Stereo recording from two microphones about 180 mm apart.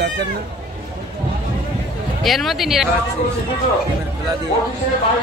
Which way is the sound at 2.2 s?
Centre (ahead or behind).